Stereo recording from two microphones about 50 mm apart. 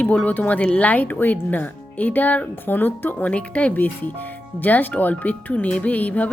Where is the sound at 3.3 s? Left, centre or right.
Left.